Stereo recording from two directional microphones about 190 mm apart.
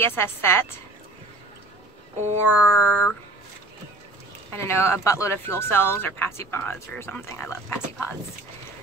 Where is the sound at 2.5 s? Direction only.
5° right (ahead or behind).